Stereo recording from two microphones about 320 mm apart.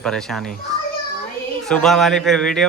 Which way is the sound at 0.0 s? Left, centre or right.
Centre.